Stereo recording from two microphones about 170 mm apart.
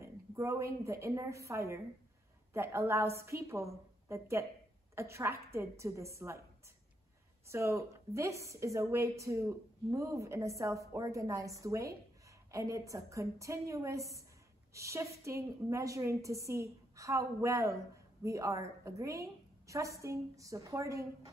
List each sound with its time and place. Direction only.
0.0 s a woman's voice: 15° right (ahead or behind)
7.4 s a woman's voice: 15° right (ahead or behind)